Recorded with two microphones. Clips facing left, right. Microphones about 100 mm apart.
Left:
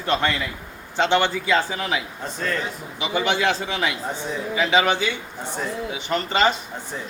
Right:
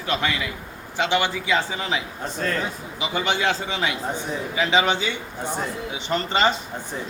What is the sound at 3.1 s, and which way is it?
Speech, 5° left (ahead or behind).